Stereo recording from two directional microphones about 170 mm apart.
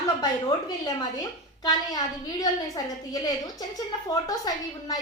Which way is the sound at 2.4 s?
20° left (ahead or behind).